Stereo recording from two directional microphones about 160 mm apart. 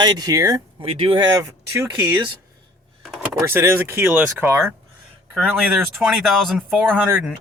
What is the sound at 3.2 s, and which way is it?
Speech, 15° right (ahead or behind).